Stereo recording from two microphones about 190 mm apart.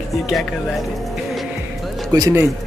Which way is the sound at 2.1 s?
20° right (ahead or behind).